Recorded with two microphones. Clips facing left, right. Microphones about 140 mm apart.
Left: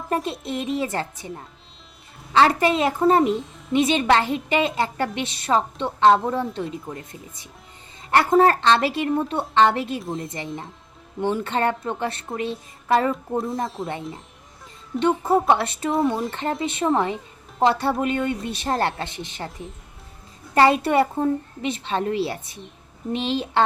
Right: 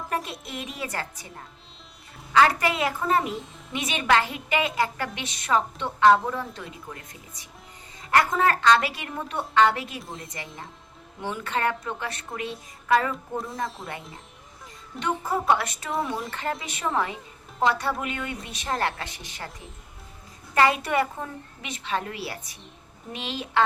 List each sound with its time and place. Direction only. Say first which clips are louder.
0.1 s a woman's voice: left 8 dB; 30° left (ahead or behind)
2.3 s a woman's voice: left 3 dB; 25° left (ahead or behind)
10.0 s speech: left 9 dB; centre (ahead or behind)
11.2 s a woman's voice: left 5 dB; 30° left (ahead or behind)
13.8 s speech: left 8 dB; centre (ahead or behind)
14.9 s a woman's voice: left 8 dB; 30° left (ahead or behind)
20.6 s a woman's voice: left 5 dB; 30° left (ahead or behind)